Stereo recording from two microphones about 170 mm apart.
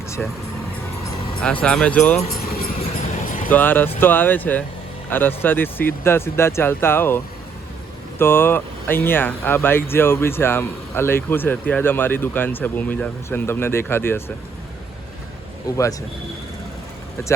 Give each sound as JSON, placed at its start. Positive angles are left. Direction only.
{"t": 0.2, "sound": "speech", "side_deg": 5}
{"t": 1.6, "sound": "speech", "side_deg": 5}
{"t": 2.4, "sound": "a sound", "side_deg": 60}
{"t": 3.2, "sound": "vehicle", "side_deg": 55}
{"t": 3.5, "sound": "speech", "side_deg": 10}
{"t": 8.2, "sound": "speech", "side_deg": 15}
{"t": 15.6, "sound": "speech", "side_deg": 20}